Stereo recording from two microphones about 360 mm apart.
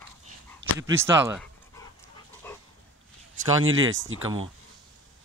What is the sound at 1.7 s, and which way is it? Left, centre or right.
Dog, centre.